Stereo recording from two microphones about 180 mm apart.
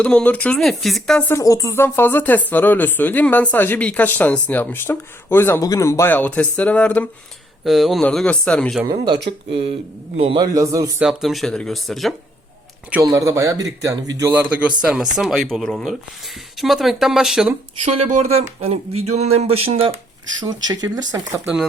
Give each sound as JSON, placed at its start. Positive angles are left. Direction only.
{"t": 0.0, "sound": "speech", "side_deg": 5}
{"t": 1.3, "sound": "speech", "side_deg": 20}
{"t": 9.5, "sound": "speech", "side_deg": -30}
{"t": 11.0, "sound": "speech", "side_deg": 0}
{"t": 12.9, "sound": "speech", "side_deg": -15}
{"t": 18.1, "sound": "speech", "side_deg": -35}
{"t": 20.4, "sound": "speech", "side_deg": -25}